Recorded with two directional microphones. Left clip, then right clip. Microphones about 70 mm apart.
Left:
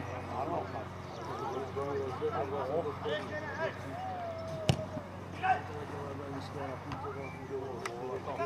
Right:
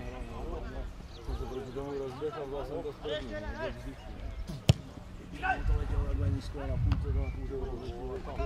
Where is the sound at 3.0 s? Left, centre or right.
Centre.